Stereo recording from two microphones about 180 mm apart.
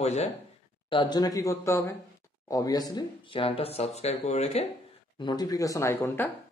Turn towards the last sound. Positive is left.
turn(degrees=15)  # may be behind; listen again after turning